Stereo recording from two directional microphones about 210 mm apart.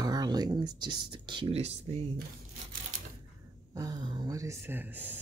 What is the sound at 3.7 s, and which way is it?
Speech, 15° right (ahead or behind).